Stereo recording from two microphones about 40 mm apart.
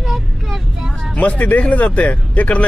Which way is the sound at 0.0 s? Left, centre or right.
Centre.